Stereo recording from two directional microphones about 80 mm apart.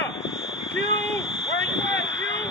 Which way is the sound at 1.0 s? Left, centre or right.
Centre.